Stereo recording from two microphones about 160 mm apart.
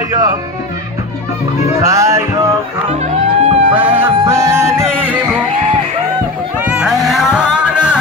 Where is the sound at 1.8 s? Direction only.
20° right (ahead or behind).